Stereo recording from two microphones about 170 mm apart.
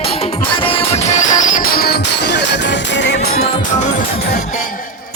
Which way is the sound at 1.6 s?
65° left (ahead or behind).